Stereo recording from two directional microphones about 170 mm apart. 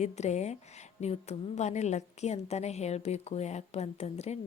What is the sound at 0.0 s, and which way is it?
A woman's voice, 40° left (ahead or behind).